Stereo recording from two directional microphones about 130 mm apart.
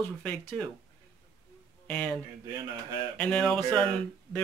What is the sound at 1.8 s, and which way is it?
Speech, 5° left (ahead or behind).